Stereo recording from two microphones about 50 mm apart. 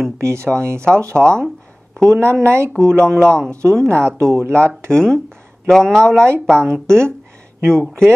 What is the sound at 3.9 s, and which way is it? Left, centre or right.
Speech, right.